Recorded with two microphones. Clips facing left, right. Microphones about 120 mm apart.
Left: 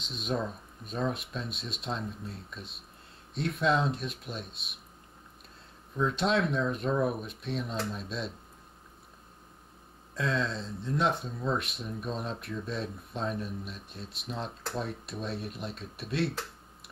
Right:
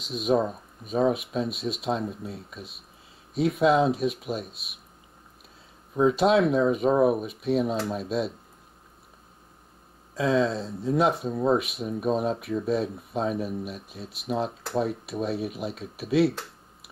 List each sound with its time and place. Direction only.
0.0 s speech: centre (ahead or behind)
6.0 s speech: 5° right (ahead or behind)
6.9 s speech: 50° right (ahead or behind)
7.2 s speech: 5° right (ahead or behind)
10.1 s speech: 5° right (ahead or behind)